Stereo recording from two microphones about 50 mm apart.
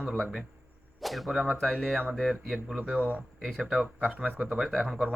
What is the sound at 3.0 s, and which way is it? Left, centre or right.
Speech, right.